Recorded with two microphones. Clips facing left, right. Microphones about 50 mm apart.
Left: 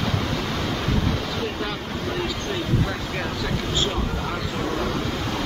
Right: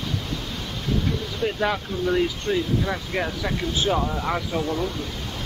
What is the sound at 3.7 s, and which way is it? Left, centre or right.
Speech, centre.